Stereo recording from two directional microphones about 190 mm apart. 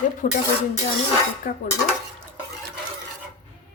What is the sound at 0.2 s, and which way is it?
Speech, 45° left (ahead or behind).